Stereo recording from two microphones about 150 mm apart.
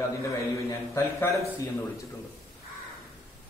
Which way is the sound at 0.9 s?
20° left (ahead or behind).